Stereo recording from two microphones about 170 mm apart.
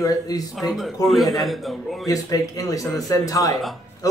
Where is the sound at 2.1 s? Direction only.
20° left (ahead or behind).